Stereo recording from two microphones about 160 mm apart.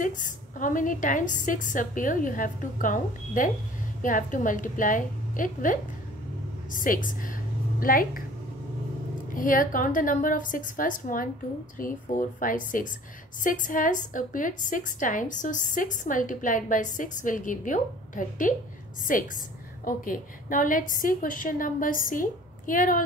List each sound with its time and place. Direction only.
0.0 s a woman's voice: 55° left (ahead or behind)
9.3 s a woman's voice: 55° left (ahead or behind)